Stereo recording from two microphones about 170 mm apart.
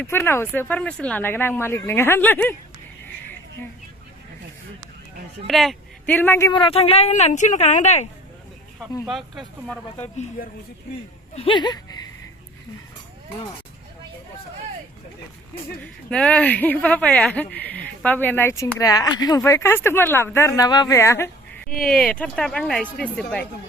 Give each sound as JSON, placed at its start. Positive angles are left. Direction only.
{"t": 0.0, "sound": "speech", "side_deg": 15}
{"t": 5.5, "sound": "speech", "side_deg": 0}
{"t": 6.1, "sound": "speech", "side_deg": 15}
{"t": 6.5, "sound": "a woman's voice", "side_deg": 30}
{"t": 9.0, "sound": "speech", "side_deg": 0}
{"t": 10.4, "sound": "speech", "side_deg": 55}
{"t": 11.3, "sound": "speech", "side_deg": 30}
{"t": 15.8, "sound": "speech", "side_deg": 5}
{"t": 21.8, "sound": "speech", "side_deg": 5}